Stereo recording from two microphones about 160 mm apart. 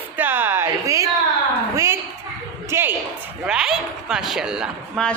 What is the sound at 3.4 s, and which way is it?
A woman's voice, 5° right (ahead or behind).